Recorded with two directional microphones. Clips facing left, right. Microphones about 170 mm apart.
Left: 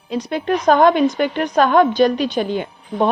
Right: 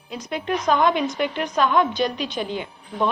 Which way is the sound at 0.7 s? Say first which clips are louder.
Left 7 dB; 50° left (ahead or behind).